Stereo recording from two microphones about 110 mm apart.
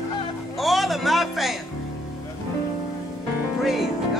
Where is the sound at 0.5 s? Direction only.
Centre (ahead or behind).